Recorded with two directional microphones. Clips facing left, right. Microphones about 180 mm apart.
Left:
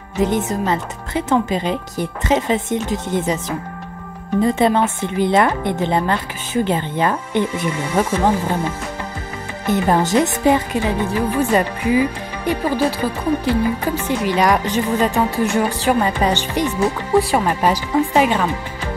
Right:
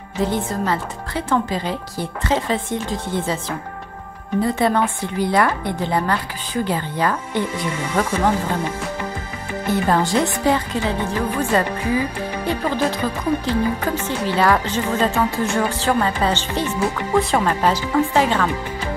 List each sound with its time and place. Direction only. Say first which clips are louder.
0.2 s speech: left 3 dB; 20° left (ahead or behind)
7.9 s speech: left 2 dB; 10° left (ahead or behind)
9.7 s speech: left 2 dB; 15° left (ahead or behind)